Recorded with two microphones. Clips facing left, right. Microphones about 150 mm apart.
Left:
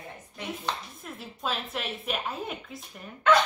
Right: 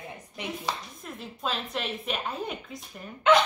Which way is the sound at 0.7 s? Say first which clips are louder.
Even; 10° right (ahead or behind).